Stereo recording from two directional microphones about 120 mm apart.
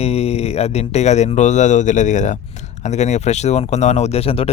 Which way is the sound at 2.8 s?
70° left (ahead or behind).